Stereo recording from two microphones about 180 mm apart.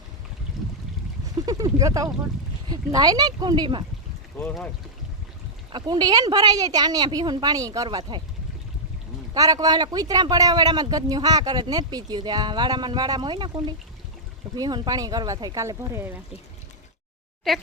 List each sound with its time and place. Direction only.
0.6 s a sound: centre (ahead or behind)
1.5 s speech: 20° right (ahead or behind)
5.7 s speech: 20° right (ahead or behind)
9.3 s speech: 20° right (ahead or behind)